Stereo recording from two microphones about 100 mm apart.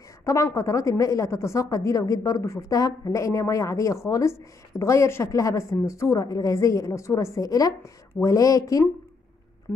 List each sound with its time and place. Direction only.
0.2 s a woman's voice: 30° left (ahead or behind)